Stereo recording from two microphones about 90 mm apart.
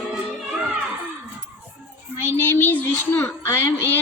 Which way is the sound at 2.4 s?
25° left (ahead or behind).